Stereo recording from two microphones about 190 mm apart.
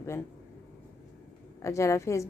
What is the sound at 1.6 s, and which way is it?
Speech, 15° left (ahead or behind).